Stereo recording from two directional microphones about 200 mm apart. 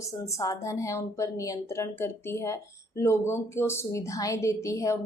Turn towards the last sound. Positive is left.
turn(degrees=15)  # may be behind; listen again after turning